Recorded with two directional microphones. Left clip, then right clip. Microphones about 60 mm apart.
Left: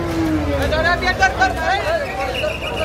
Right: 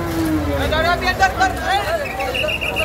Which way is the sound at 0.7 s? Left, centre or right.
Right.